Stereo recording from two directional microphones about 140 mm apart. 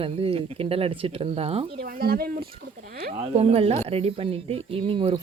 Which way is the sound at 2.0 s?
90° right.